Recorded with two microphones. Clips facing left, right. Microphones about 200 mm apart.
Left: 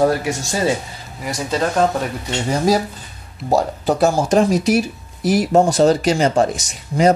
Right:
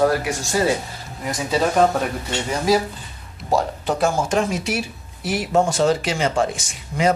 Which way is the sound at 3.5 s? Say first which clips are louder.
Left 4 dB; 40° left (ahead or behind).